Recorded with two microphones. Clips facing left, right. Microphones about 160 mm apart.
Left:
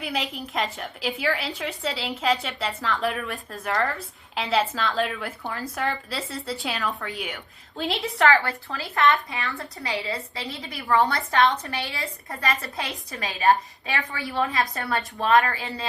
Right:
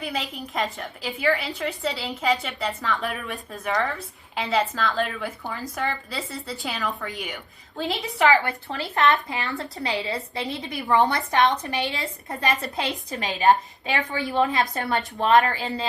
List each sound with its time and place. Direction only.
0.0 s a woman's voice: centre (ahead or behind)
8.3 s a woman's voice: 20° right (ahead or behind)